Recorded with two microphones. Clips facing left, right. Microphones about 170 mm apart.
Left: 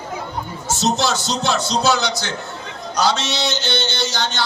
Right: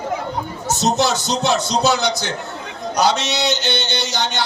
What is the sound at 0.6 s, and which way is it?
A man's voice, 15° right (ahead or behind).